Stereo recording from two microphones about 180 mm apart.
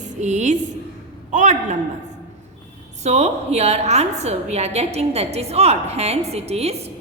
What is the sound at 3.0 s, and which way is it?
A woman's voice, 35° right (ahead or behind).